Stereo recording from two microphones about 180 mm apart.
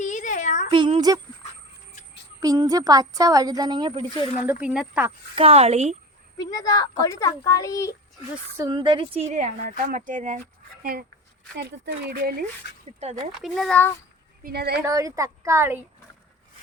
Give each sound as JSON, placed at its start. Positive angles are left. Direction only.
{"t": 0.0, "sound": "a sound", "side_deg": 45}
{"t": 0.7, "sound": "speech", "side_deg": -25}
{"t": 2.4, "sound": "speech", "side_deg": -20}
{"t": 4.4, "sound": "a woman's voice", "side_deg": -5}
{"t": 5.3, "sound": "speech", "side_deg": -35}
{"t": 6.3, "sound": "a child's voice", "side_deg": 20}
{"t": 8.5, "sound": "a woman's voice", "side_deg": -20}
{"t": 11.5, "sound": "speech", "side_deg": -65}
{"t": 13.0, "sound": "speech", "side_deg": -35}
{"t": 13.4, "sound": "a child's voice", "side_deg": 0}
{"t": 14.4, "sound": "speech", "side_deg": -60}
{"t": 14.8, "sound": "a woman's voice", "side_deg": -15}